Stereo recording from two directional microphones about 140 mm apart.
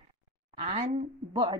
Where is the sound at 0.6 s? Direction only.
60° right (ahead or behind).